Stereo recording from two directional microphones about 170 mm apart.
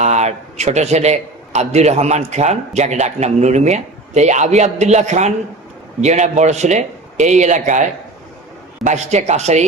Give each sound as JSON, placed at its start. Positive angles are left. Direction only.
{"t": 0.0, "sound": "a man's voice", "side_deg": -40}